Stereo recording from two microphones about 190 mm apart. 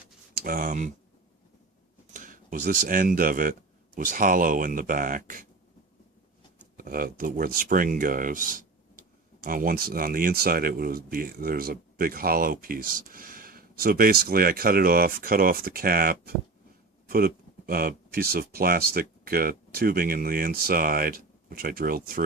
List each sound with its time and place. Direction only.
0.3 s speech: 50° right (ahead or behind)
2.1 s speech: 45° right (ahead or behind)
6.7 s speech: 50° right (ahead or behind)